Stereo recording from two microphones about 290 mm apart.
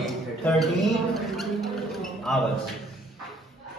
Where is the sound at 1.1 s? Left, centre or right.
Centre.